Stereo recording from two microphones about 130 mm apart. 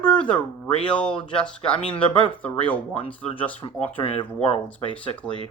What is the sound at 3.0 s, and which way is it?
Speech, 40° left (ahead or behind).